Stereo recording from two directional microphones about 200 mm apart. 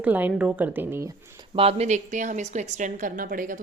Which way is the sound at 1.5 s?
30° right (ahead or behind).